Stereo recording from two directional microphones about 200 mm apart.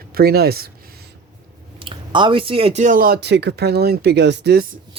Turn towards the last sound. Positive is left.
turn(degrees=-55)  # may be behind; listen again after turning